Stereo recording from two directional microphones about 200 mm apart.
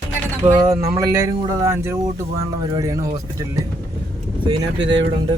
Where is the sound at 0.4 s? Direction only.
15° right (ahead or behind).